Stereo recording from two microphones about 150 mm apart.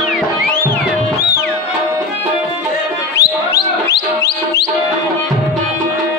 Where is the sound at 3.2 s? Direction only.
90° left.